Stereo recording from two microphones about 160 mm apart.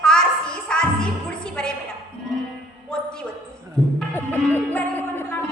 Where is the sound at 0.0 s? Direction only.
5° left (ahead or behind).